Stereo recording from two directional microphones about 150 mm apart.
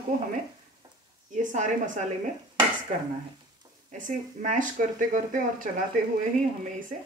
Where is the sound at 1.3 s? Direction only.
55° right (ahead or behind).